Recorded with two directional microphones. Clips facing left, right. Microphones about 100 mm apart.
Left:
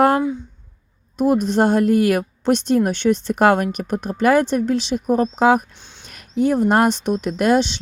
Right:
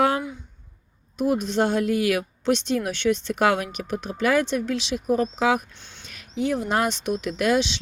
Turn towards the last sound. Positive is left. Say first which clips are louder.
# left 5 dB
turn(degrees=40)  # may be behind; listen again after turning